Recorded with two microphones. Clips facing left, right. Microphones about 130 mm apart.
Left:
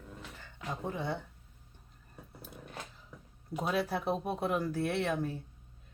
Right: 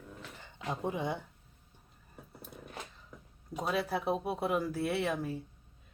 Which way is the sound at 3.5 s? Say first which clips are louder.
Left 1 dB; centre (ahead or behind).